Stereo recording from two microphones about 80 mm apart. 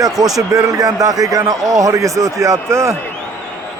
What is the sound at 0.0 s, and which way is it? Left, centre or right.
A man's voice, right.